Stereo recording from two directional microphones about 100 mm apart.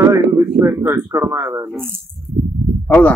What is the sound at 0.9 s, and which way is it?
Speech, 40° right (ahead or behind).